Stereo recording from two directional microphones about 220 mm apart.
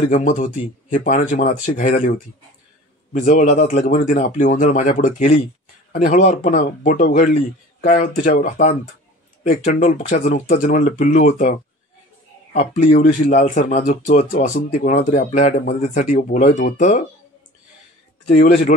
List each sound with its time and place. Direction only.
0.0 s speech: 35° left (ahead or behind)
3.1 s speech: 35° left (ahead or behind)
12.5 s speech: 35° left (ahead or behind)
18.2 s speech: 40° left (ahead or behind)